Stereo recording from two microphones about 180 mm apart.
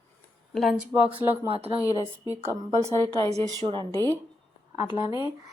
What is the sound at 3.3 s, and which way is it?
Speech, 35° right (ahead or behind).